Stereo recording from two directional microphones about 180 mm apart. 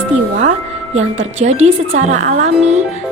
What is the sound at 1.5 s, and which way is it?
Speech, 40° right (ahead or behind).